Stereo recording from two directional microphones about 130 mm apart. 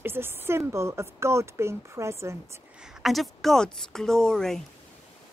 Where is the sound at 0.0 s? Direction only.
15° right (ahead or behind).